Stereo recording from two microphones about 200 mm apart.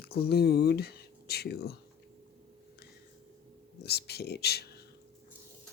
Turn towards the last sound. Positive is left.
turn(degrees=55)  # may be behind; listen again after turning